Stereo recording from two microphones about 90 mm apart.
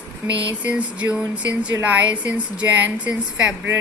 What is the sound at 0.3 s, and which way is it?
A woman's voice, 15° right (ahead or behind).